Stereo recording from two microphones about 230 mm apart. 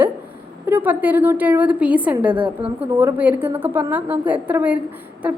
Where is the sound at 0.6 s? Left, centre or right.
Centre.